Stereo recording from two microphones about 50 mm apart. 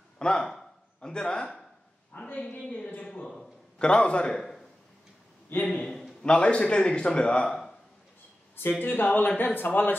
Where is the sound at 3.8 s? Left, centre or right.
Left.